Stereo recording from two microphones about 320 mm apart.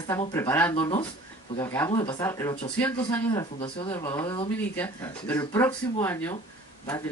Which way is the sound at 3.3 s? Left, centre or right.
Centre.